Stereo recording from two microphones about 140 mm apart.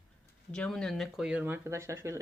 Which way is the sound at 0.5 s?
5° left (ahead or behind).